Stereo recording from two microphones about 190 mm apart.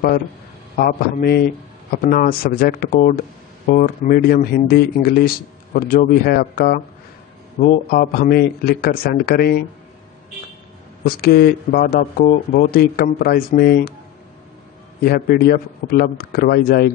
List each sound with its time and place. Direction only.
0.7 s speech: 50° left (ahead or behind)
11.1 s speech: 55° left (ahead or behind)
15.0 s speech: 50° left (ahead or behind)